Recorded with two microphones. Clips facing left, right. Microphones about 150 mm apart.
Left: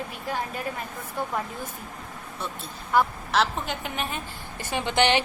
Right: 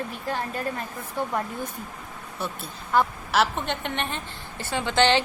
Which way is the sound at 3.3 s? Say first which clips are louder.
Right 1 dB; centre (ahead or behind).